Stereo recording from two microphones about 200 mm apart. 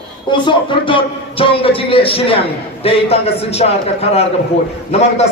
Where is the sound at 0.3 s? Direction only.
25° left (ahead or behind).